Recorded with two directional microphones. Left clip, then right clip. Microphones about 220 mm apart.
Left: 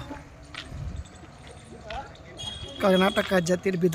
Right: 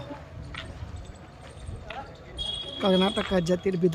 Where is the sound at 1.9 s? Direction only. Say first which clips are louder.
Left 2 dB; 5° right (ahead or behind).